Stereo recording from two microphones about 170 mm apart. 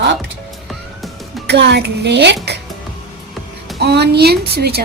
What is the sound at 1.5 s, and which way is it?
A woman's voice, 85° right.